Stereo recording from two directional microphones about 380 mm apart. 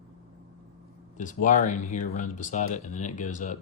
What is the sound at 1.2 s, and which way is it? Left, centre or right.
Speech, centre.